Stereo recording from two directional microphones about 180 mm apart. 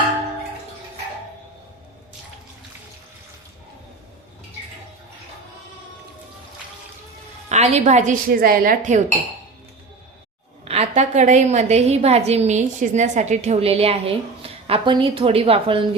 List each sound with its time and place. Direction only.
7.5 s a woman's voice: 40° right (ahead or behind)
10.7 s a woman's voice: 35° right (ahead or behind)